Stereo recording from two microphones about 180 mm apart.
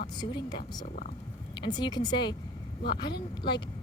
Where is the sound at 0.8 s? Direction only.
45° left (ahead or behind).